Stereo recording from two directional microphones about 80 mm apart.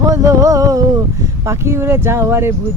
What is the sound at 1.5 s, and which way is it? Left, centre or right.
Speech, right.